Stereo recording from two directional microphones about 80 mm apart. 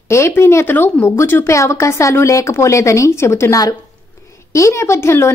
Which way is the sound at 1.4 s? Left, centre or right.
Left.